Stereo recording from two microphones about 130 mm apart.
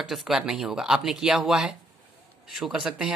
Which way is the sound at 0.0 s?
Centre (ahead or behind).